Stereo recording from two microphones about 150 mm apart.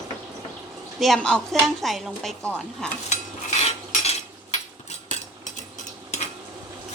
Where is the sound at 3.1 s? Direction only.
45° left (ahead or behind).